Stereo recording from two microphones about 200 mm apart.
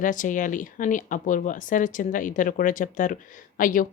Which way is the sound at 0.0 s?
40° left (ahead or behind).